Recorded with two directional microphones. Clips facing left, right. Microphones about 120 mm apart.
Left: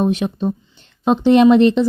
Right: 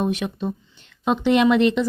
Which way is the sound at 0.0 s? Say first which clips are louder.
Left 6 dB; 30° left (ahead or behind).